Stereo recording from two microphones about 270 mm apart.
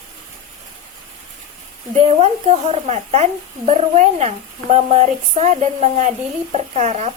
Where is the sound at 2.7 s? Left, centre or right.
Right.